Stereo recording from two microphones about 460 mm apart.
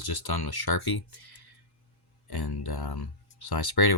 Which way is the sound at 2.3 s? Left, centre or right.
Left.